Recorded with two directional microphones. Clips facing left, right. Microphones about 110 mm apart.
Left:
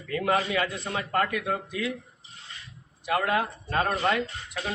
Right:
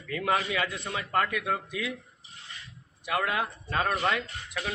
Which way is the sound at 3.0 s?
35° left (ahead or behind).